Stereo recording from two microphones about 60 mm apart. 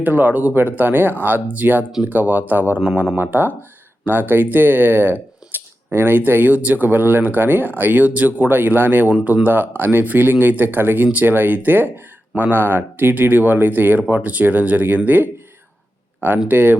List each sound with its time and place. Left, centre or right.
0.0 s speech: right
16.5 s speech: right